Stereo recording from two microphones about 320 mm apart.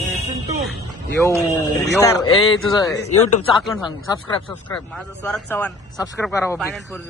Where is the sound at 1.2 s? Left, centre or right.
Centre.